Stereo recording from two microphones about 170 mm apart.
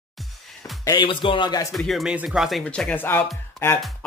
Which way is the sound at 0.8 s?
30° left (ahead or behind).